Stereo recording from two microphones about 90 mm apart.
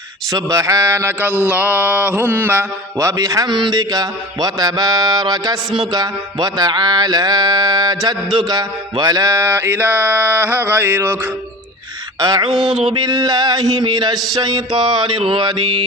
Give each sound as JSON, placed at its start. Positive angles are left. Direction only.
{"t": 0.3, "sound": "mantra", "side_deg": -40}
{"t": 1.5, "sound": "mantra", "side_deg": -15}
{"t": 3.0, "sound": "a man's voice", "side_deg": -40}
{"t": 8.4, "sound": "mantra", "side_deg": -50}
{"t": 12.2, "sound": "a man's voice", "side_deg": -50}
{"t": 12.5, "sound": "mantra", "side_deg": -5}
{"t": 12.9, "sound": "a man's voice", "side_deg": -50}
{"t": 14.3, "sound": "music", "side_deg": -55}